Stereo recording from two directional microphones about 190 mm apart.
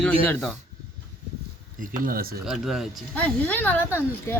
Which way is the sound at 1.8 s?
45° right (ahead or behind).